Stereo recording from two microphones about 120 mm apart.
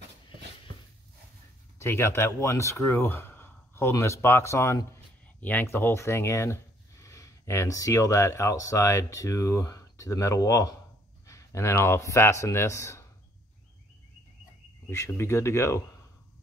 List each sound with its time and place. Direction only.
1.8 s speech: 20° left (ahead or behind)
14.9 s speech: 20° left (ahead or behind)